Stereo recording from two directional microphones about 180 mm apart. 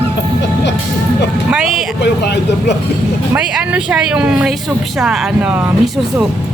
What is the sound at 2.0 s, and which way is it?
Speech, 70° left (ahead or behind).